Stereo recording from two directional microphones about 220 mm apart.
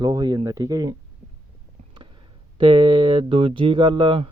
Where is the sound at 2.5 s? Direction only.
20° right (ahead or behind).